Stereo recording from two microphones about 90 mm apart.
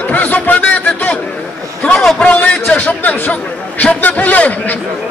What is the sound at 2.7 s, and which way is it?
A man's voice, 15° left (ahead or behind).